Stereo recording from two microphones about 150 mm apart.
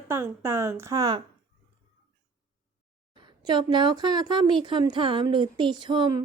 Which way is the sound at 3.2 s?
30° right (ahead or behind).